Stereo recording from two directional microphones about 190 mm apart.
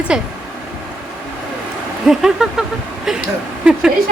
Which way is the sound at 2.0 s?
5° right (ahead or behind).